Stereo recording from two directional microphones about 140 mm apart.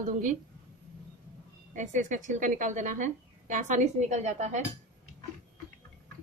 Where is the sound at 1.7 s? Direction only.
65° right (ahead or behind).